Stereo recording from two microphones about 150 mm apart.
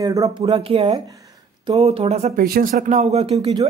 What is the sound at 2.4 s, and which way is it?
Speech, 75° right (ahead or behind).